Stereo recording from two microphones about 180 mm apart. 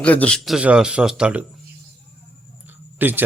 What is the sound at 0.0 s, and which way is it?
Speech, 10° left (ahead or behind).